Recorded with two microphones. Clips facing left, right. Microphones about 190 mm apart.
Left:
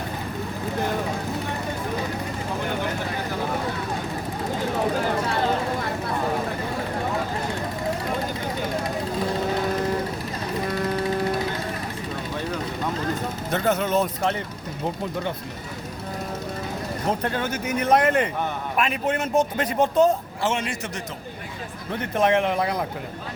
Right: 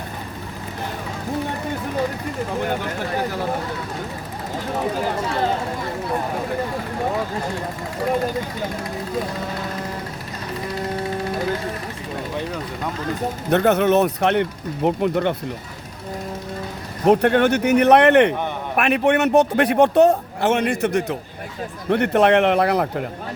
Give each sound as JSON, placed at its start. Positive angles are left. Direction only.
{"t": 13.5, "sound": "a man's voice", "side_deg": -65}
{"t": 17.1, "sound": "a man's voice", "side_deg": -70}